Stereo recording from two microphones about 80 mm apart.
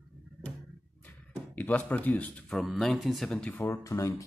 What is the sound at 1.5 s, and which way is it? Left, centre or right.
Speech, centre.